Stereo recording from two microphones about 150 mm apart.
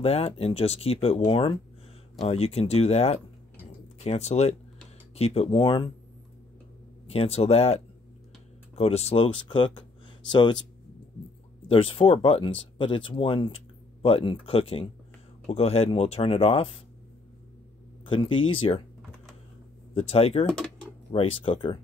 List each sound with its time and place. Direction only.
0.0 s speech: 40° left (ahead or behind)
7.1 s speech: 40° left (ahead or behind)
11.6 s speech: 40° left (ahead or behind)
18.0 s speech: 35° left (ahead or behind)
19.9 s speech: 40° left (ahead or behind)
20.4 s a sound: 5° left (ahead or behind)
21.1 s speech: 40° left (ahead or behind)